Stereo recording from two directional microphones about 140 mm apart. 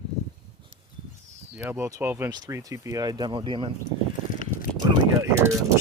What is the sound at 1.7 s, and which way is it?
Speech, 20° right (ahead or behind).